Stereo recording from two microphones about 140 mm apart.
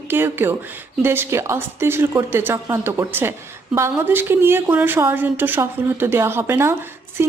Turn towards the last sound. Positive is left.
turn(degrees=-15)  # may be behind; listen again after turning